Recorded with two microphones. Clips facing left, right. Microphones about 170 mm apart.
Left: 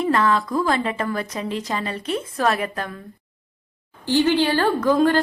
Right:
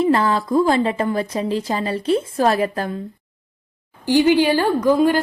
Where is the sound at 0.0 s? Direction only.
30° right (ahead or behind).